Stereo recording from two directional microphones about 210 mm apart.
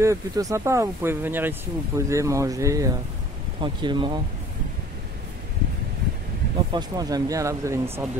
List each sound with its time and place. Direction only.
0.0 s speech: 15° right (ahead or behind)
6.7 s speech: 20° right (ahead or behind)